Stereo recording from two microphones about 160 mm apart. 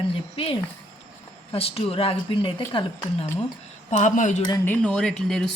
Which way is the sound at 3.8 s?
50° left (ahead or behind).